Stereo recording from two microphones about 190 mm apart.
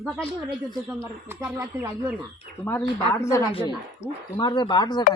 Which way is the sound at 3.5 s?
30° left (ahead or behind).